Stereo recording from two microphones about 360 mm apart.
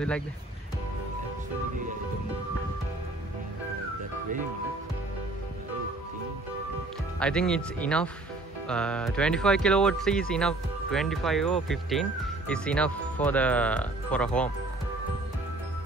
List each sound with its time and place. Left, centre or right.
7.2 s speech: centre